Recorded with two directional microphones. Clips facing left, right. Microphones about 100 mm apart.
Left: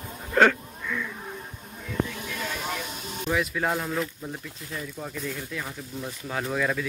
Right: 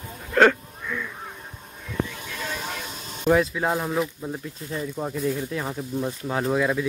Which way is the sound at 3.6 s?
20° right (ahead or behind).